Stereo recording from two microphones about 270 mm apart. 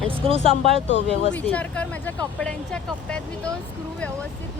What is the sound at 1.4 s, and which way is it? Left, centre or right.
Speech, centre.